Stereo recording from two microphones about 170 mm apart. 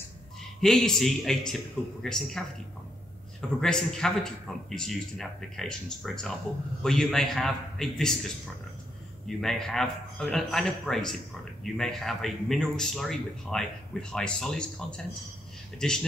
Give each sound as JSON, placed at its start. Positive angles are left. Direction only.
{"t": 0.6, "sound": "a man's voice", "side_deg": 0}
{"t": 9.4, "sound": "a man's voice", "side_deg": 0}